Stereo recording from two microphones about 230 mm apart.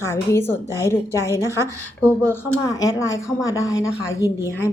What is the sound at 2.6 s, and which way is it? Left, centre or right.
Speech, centre.